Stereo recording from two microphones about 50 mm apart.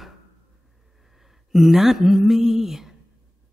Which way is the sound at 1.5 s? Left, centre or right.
Centre.